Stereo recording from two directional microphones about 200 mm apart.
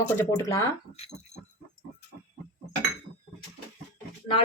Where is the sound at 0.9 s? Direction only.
35° left (ahead or behind).